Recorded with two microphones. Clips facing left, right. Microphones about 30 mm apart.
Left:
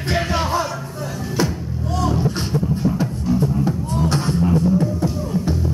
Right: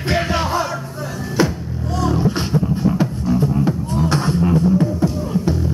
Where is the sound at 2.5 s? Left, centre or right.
Right.